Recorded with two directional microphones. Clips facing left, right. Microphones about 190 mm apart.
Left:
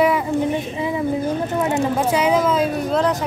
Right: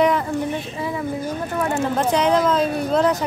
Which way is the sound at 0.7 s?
15° left (ahead or behind).